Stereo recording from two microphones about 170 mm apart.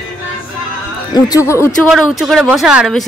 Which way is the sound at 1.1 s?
20° left (ahead or behind).